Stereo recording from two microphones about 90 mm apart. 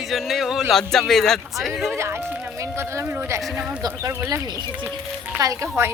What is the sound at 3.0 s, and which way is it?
A woman's voice, 35° right (ahead or behind).